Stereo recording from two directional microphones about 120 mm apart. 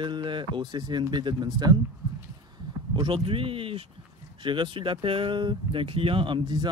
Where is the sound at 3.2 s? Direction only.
50° right (ahead or behind).